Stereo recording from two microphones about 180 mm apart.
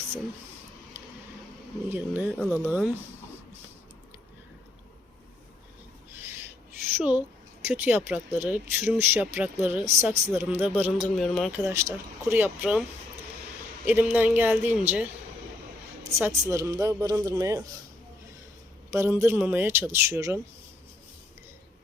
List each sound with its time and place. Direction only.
1.9 s speech: 10° right (ahead or behind)
6.9 s speech: 5° right (ahead or behind)
11.2 s speech: centre (ahead or behind)
11.6 s speech: 15° right (ahead or behind)
13.8 s speech: 10° right (ahead or behind)
16.0 s speech: 15° right (ahead or behind)
18.9 s speech: 15° right (ahead or behind)